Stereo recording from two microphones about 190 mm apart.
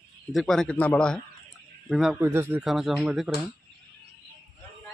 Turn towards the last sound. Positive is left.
turn(degrees=-5)  # may be behind; listen again after turning